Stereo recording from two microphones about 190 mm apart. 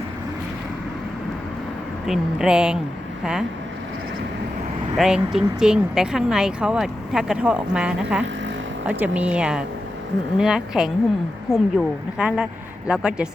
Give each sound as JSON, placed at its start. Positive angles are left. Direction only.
{"t": 2.0, "sound": "speech", "side_deg": -5}
{"t": 4.9, "sound": "speech", "side_deg": -5}